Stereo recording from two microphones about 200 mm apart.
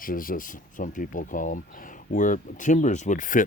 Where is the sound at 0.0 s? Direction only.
45° left (ahead or behind).